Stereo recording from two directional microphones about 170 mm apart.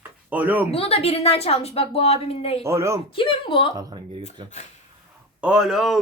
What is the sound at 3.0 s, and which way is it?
Speech, 30° left (ahead or behind).